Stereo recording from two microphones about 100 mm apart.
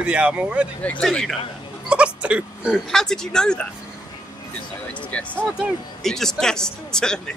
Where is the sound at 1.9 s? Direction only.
10° right (ahead or behind).